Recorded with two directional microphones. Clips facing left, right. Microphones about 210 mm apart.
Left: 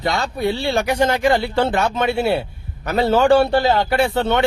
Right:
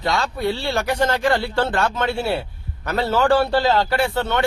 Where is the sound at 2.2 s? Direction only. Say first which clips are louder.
Left 4 dB; 25° left (ahead or behind).